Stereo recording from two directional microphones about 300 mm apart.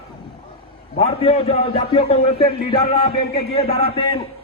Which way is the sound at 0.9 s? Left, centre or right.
Left.